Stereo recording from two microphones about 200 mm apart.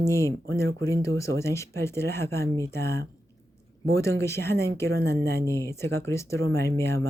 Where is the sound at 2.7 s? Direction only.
55° right (ahead or behind).